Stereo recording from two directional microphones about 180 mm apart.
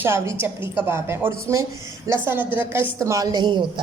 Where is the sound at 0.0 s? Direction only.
15° right (ahead or behind).